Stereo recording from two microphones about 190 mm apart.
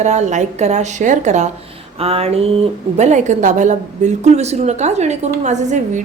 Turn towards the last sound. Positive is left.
turn(degrees=-40)  # may be behind; listen again after turning